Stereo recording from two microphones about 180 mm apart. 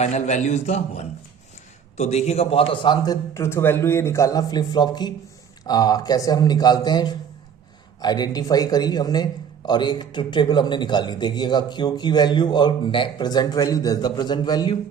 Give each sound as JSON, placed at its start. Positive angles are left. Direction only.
{"t": 0.0, "sound": "a man's voice", "side_deg": 40}